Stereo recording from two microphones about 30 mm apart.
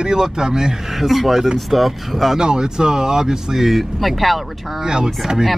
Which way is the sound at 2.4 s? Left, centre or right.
Right.